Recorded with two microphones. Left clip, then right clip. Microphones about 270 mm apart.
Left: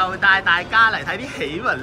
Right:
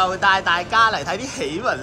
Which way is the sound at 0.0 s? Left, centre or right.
Centre.